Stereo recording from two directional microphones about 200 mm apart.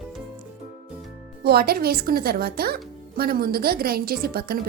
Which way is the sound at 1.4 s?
50° right (ahead or behind).